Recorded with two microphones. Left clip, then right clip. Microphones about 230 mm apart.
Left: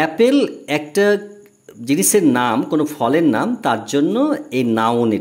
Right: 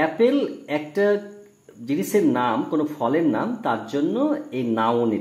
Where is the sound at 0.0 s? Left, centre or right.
Left.